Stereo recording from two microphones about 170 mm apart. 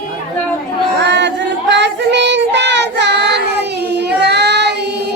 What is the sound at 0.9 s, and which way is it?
Child singing, 90° right.